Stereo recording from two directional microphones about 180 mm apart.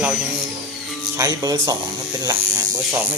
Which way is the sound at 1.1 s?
20° right (ahead or behind).